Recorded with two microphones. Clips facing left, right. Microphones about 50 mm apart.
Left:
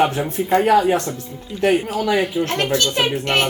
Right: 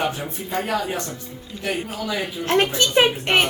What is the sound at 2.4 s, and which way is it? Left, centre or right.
Speech, centre.